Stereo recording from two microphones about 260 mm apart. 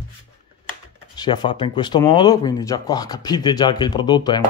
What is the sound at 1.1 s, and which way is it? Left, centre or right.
Speech, centre.